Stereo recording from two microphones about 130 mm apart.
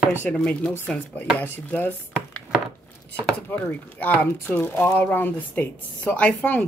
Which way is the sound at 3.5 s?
15° left (ahead or behind).